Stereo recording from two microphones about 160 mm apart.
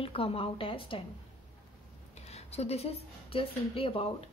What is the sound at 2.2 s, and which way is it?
A woman's voice, 40° left (ahead or behind).